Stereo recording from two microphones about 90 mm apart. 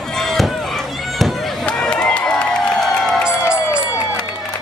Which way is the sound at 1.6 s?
10° left (ahead or behind).